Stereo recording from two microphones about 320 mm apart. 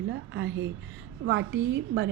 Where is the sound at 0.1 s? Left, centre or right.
Right.